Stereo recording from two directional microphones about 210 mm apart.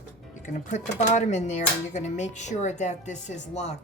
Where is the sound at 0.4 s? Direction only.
35° left (ahead or behind).